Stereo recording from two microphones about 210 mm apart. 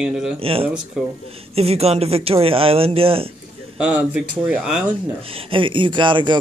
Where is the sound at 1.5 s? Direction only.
30° right (ahead or behind).